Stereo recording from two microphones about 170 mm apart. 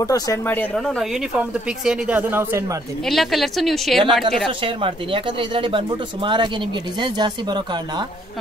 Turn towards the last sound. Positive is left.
turn(degrees=-25)  # may be behind; listen again after turning